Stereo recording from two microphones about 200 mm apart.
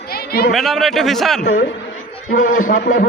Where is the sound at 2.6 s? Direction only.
40° left (ahead or behind).